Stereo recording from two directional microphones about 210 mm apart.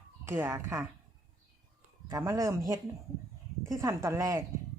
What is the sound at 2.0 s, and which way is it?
A woman's voice, 15° right (ahead or behind).